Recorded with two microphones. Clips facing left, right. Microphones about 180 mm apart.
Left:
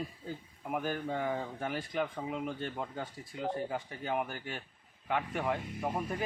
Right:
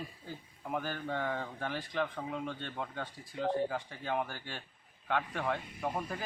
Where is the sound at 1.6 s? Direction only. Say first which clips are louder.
Left 1 dB; 25° left (ahead or behind).